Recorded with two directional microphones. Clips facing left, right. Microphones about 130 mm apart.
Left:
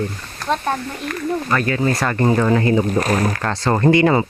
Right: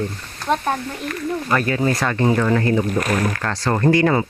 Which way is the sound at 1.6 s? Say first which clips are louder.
Left 1 dB; 20° right (ahead or behind).